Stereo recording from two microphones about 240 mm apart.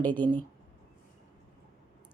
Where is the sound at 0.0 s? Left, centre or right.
Centre.